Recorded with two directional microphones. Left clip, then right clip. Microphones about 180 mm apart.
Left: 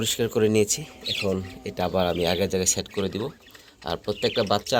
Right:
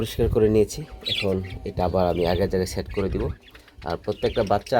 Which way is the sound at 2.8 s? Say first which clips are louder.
Right 1 dB; 30° right (ahead or behind).